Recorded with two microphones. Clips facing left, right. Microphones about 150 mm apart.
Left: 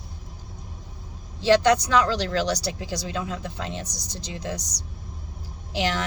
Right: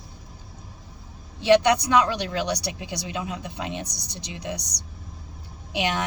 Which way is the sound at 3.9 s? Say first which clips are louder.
Left 1 dB; 65° right (ahead or behind).